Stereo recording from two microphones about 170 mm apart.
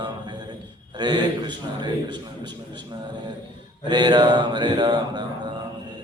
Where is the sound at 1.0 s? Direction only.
25° right (ahead or behind).